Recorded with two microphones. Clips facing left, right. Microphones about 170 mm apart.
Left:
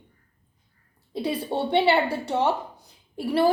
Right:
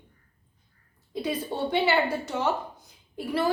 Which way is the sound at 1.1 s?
30° left (ahead or behind).